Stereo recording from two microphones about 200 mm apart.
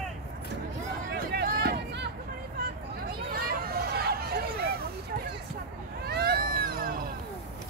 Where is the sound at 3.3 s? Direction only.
50° right (ahead or behind).